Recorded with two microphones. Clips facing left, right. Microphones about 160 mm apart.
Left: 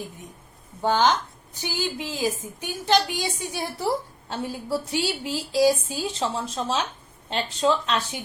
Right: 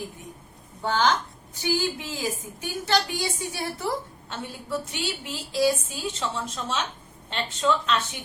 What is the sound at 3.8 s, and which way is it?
A woman's voice, 35° left (ahead or behind).